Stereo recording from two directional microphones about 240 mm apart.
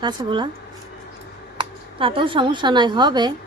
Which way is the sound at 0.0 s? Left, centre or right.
Centre.